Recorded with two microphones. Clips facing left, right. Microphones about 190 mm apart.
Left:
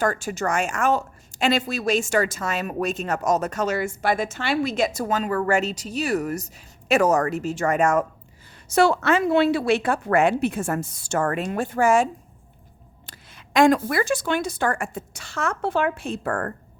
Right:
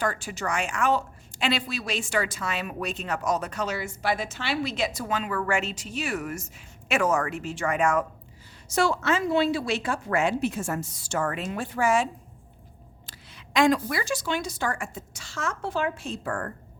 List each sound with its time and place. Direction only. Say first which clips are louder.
0.0 s a woman's voice: left 5 dB; 45° left (ahead or behind)
8.7 s a woman's voice: left 6 dB; 60° left (ahead or behind)
13.1 s a woman's voice: left 2 dB; 50° left (ahead or behind)